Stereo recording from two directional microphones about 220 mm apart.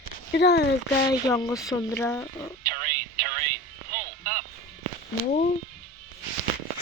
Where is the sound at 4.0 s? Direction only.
40° right (ahead or behind).